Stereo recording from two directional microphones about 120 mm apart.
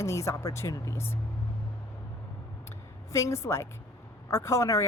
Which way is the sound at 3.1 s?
25° left (ahead or behind).